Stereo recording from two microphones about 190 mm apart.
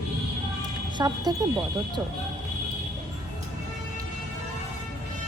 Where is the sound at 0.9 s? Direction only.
20° right (ahead or behind).